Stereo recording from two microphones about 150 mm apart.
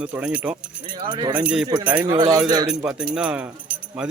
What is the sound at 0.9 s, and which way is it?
Speech, 30° right (ahead or behind).